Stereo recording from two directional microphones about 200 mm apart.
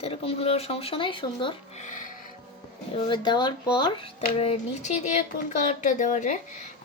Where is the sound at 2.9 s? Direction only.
25° left (ahead or behind); by 6.7 s 40° left (ahead or behind).